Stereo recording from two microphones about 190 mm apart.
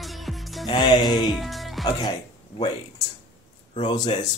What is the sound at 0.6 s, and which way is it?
Music, 25° left (ahead or behind).